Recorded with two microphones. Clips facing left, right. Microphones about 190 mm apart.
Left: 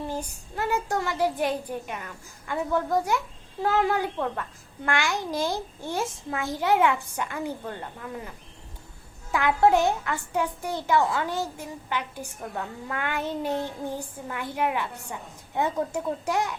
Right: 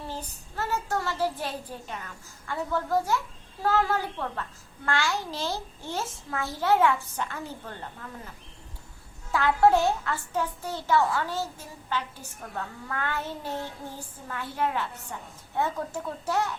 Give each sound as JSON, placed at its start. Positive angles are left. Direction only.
{"t": 0.1, "sound": "a child's voice", "side_deg": 15}
{"t": 9.3, "sound": "a child's voice", "side_deg": 15}